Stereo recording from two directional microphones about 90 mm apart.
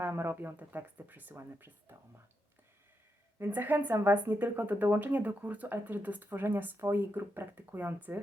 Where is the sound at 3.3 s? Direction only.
25° right (ahead or behind).